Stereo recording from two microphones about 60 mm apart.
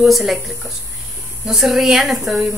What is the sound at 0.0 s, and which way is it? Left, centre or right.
Speech, centre.